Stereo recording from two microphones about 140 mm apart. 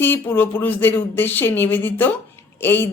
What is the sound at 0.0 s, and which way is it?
Speech, 15° left (ahead or behind).